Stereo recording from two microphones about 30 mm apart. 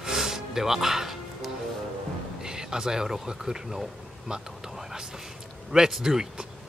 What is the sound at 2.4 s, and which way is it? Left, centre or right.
Speech, right.